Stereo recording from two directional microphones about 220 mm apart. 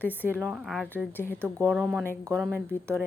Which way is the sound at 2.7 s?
5° left (ahead or behind).